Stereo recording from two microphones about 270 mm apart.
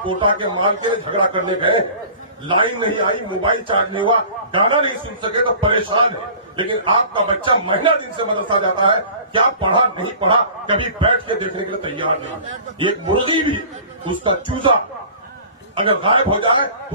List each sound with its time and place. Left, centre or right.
0.0 s a man's voice: centre
15.7 s a man's voice: centre